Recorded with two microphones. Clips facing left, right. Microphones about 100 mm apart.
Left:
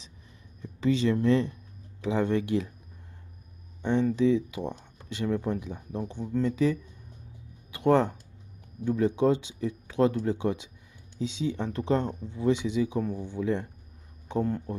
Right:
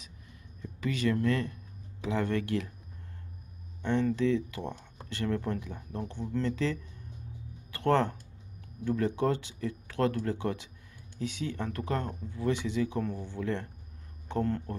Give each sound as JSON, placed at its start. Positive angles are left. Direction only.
{"t": 0.6, "sound": "speech", "side_deg": 25}
{"t": 3.8, "sound": "speech", "side_deg": 15}